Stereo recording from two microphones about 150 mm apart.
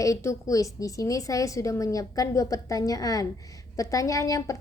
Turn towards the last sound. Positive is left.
turn(degrees=20)  # may be behind; listen again after turning